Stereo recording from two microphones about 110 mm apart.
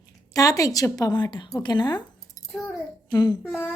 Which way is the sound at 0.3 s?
30° left (ahead or behind).